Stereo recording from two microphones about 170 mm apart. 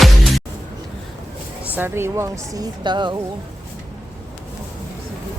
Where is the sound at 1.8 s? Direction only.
15° right (ahead or behind).